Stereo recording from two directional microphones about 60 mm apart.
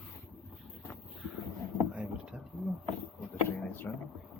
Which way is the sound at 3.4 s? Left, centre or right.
Left.